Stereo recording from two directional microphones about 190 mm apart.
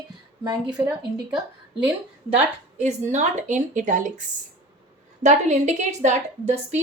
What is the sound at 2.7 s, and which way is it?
A woman's voice, 40° right (ahead or behind).